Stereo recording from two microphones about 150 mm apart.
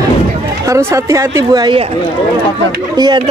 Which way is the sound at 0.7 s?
20° right (ahead or behind).